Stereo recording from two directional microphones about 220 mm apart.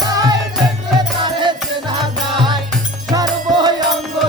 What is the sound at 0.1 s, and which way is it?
Music, 15° right (ahead or behind).